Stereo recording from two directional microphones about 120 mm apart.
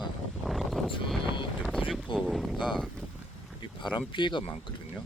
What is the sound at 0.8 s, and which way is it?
Speech, 45° left (ahead or behind).